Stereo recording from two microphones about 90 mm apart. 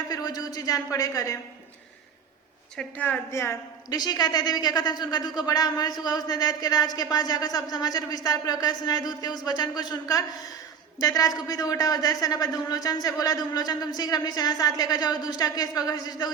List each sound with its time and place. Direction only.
0.1 s a man's voice: 45° left (ahead or behind)
2.7 s a woman's voice: 15° left (ahead or behind)
3.8 s a man's voice: 45° left (ahead or behind)